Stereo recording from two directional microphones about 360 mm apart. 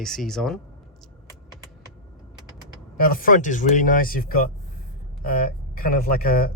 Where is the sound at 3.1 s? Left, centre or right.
Left.